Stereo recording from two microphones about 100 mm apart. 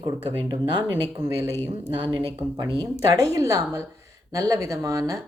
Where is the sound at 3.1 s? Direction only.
35° right (ahead or behind).